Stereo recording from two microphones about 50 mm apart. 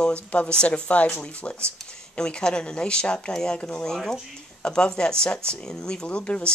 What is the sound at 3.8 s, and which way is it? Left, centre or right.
Speech, centre.